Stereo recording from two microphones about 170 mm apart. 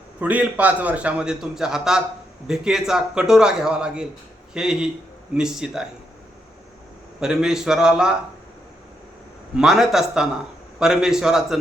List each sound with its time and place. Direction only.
0.2 s a man's voice: 10° right (ahead or behind)
7.2 s a man's voice: 5° right (ahead or behind)
9.6 s a man's voice: centre (ahead or behind)